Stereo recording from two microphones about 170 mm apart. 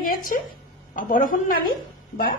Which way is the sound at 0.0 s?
55° left (ahead or behind).